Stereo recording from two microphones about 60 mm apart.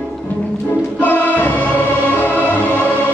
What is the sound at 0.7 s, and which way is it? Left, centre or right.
Music, left.